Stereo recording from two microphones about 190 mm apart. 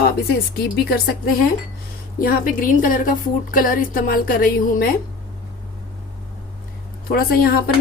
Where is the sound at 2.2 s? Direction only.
50° left (ahead or behind).